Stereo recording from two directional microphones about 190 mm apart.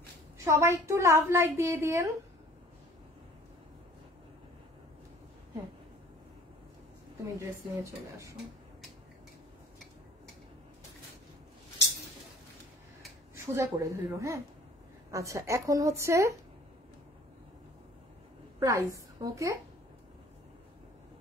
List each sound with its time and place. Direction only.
0.4 s a woman's voice: 15° right (ahead or behind)
7.3 s a woman's voice: 15° right (ahead or behind)
13.5 s a woman's voice: 15° right (ahead or behind)
18.6 s a woman's voice: 15° right (ahead or behind)